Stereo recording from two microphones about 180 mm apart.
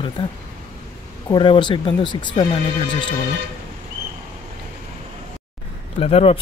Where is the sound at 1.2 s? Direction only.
25° left (ahead or behind).